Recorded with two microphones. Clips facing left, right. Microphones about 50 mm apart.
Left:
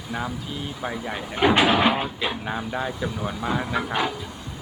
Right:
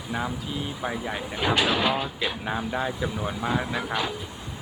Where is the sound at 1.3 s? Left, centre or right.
Left.